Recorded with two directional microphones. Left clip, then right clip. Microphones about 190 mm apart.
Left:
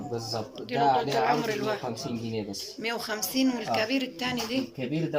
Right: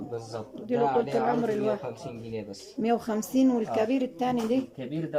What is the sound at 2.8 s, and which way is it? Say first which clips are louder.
Speech: right 4 dB; 50° right (ahead or behind).